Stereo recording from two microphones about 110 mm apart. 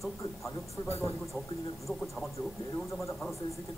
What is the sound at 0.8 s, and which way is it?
Speech, 25° left (ahead or behind).